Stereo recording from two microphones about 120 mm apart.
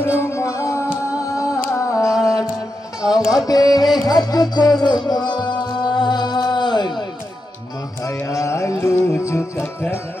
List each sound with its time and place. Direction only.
0.0 s music: 20° left (ahead or behind)
3.2 s music: 5° right (ahead or behind)
3.4 s music: 30° left (ahead or behind)
8.0 s carnatic music: 25° left (ahead or behind)
8.9 s music: 20° left (ahead or behind)